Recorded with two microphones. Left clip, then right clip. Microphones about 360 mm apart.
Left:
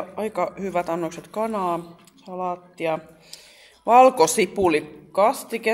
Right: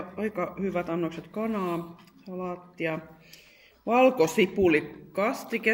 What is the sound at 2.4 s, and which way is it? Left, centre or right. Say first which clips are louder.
A man's voice: left 6 dB; centre.